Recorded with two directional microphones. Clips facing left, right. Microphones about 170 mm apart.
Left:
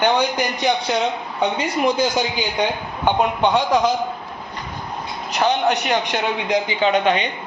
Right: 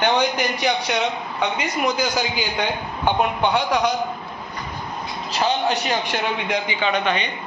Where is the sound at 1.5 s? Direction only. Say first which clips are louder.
Left 4 dB; 30° left (ahead or behind).